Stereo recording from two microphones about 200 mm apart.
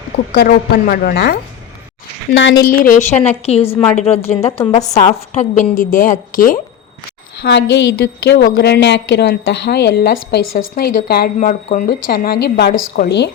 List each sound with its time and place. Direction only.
0.3 s speech: 50° left (ahead or behind)
2.3 s a woman's voice: 70° left (ahead or behind)
2.8 s speech: 45° left (ahead or behind)
3.4 s a woman's voice: 30° left (ahead or behind)
7.3 s a woman's voice: 55° left (ahead or behind)